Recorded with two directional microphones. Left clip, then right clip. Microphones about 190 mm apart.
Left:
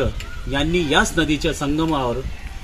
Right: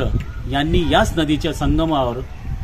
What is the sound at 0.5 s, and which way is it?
Speech, 20° right (ahead or behind).